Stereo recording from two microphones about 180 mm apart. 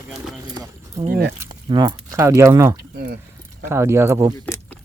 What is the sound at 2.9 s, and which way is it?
Speech, 60° right (ahead or behind).